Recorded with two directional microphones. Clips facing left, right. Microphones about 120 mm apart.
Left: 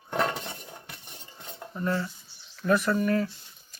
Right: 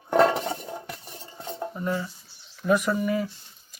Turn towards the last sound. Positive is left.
turn(degrees=-10)  # may be behind; listen again after turning